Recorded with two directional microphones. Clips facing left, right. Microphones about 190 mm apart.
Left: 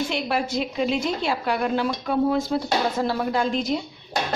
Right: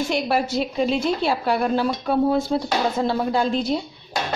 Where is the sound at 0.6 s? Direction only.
35° right (ahead or behind).